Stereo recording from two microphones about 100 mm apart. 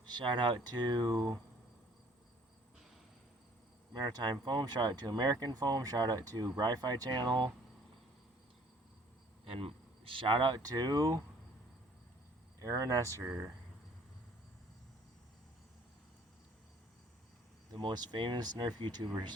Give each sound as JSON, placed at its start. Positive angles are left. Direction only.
{"t": 0.0, "sound": "speech", "side_deg": -50}
{"t": 3.9, "sound": "speech", "side_deg": -45}
{"t": 9.4, "sound": "speech", "side_deg": -70}
{"t": 10.6, "sound": "speech", "side_deg": -40}
{"t": 12.5, "sound": "speech", "side_deg": -35}
{"t": 17.7, "sound": "speech", "side_deg": -50}